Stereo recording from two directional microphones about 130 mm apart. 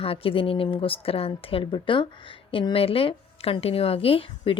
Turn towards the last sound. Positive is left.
turn(degrees=45)  # may be behind; listen again after turning